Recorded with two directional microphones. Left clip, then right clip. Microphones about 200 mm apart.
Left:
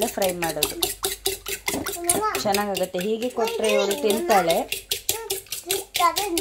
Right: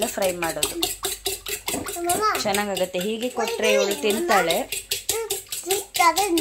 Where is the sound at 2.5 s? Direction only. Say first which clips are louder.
Even; 5° left (ahead or behind).